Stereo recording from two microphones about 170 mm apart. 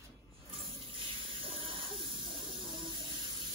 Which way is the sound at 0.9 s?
30° right (ahead or behind).